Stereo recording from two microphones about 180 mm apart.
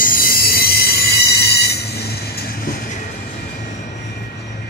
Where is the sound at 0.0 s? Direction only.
55° left (ahead or behind).